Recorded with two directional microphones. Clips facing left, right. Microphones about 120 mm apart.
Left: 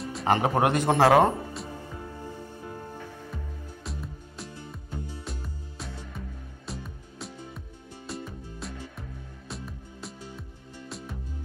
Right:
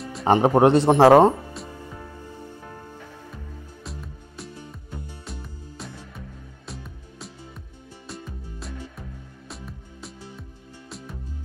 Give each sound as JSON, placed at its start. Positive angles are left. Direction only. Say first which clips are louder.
{"t": 0.2, "sound": "speech", "louder": "right 7 dB", "side_deg": -30}
{"t": 3.9, "sound": "music", "louder": "left 1 dB", "side_deg": 0}